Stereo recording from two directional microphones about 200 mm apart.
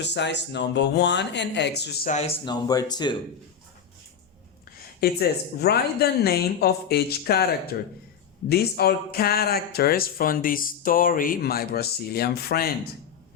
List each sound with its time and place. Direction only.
0.0 s speech: 60° left (ahead or behind)
2.0 s speech: 30° left (ahead or behind)
4.9 s speech: 50° left (ahead or behind)